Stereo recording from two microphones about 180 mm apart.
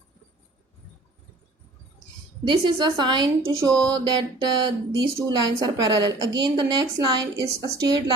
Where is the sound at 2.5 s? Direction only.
25° right (ahead or behind).